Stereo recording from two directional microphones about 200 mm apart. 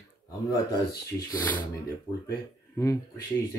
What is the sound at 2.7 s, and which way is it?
Speech, 15° left (ahead or behind).